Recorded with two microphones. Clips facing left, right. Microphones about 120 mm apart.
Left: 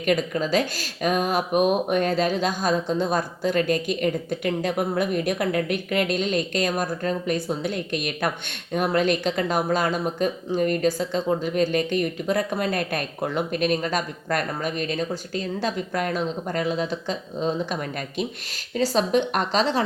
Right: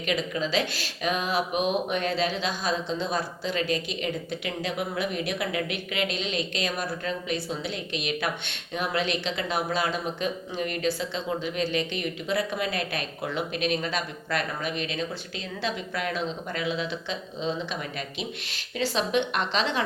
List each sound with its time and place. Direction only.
0.0 s speech: 50° left (ahead or behind)
18.8 s a woman's voice: 40° left (ahead or behind)